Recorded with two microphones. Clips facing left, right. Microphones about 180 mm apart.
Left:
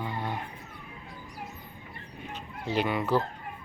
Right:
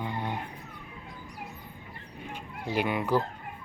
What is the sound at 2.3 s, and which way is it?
Speech, 10° right (ahead or behind).